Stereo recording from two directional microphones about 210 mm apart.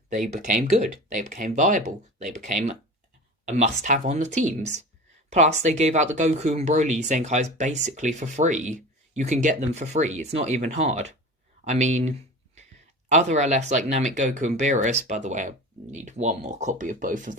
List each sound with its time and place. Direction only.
0.3 s speech: 35° right (ahead or behind)